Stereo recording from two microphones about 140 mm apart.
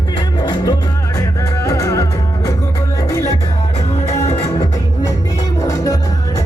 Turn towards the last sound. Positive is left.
turn(degrees=25)  # may be behind; listen again after turning